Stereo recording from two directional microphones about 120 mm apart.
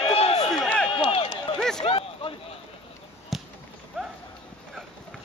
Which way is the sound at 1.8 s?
50° left (ahead or behind).